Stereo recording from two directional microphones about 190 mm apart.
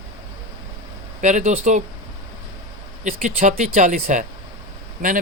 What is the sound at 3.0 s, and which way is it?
Speech, 40° right (ahead or behind).